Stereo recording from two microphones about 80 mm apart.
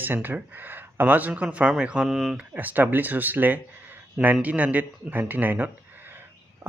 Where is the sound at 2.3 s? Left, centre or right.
Right.